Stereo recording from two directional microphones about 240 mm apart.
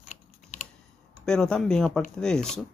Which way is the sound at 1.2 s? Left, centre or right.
Centre.